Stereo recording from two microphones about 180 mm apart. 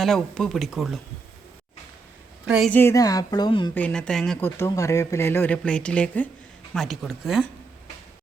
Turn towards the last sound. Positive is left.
turn(degrees=0)  # may be behind; listen again after turning